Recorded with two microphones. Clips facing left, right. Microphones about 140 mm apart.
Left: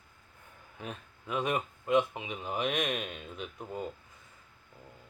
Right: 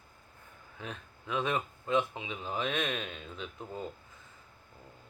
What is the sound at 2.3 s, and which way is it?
Mantra, 15° left (ahead or behind).